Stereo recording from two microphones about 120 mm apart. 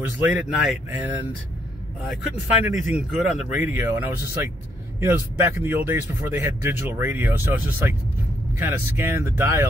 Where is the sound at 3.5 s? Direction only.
15° right (ahead or behind).